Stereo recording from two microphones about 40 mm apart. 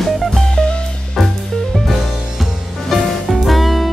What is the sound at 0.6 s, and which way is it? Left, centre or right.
Music, centre.